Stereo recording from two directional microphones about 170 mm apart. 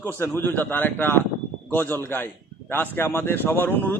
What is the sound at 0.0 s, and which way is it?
A man's voice, 15° left (ahead or behind).